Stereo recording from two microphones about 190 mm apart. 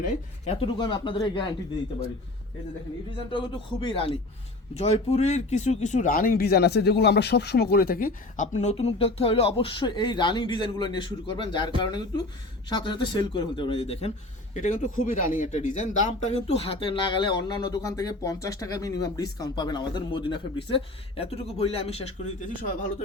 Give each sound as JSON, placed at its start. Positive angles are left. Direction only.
{"t": 0.4, "sound": "a man's voice", "side_deg": 30}
{"t": 3.8, "sound": "a man's voice", "side_deg": 30}